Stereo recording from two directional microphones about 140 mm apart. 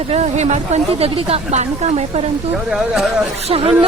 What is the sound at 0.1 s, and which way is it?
A woman's voice, 55° right (ahead or behind).